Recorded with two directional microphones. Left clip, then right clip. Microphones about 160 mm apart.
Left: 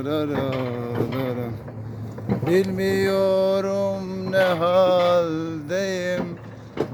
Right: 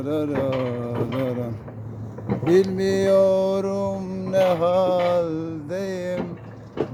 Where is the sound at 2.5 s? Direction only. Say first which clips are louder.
Right 2 dB; 30° right (ahead or behind); by 4.7 s 10° right (ahead or behind).